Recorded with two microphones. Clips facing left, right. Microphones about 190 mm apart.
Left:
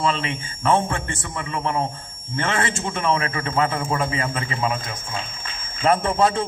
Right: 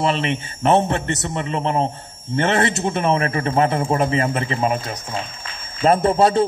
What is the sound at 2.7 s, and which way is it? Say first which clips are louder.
A man's voice: right 4 dB; 40° right (ahead or behind).